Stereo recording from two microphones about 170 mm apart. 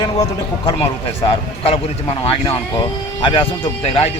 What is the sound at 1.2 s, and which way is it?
Speech, 35° left (ahead or behind).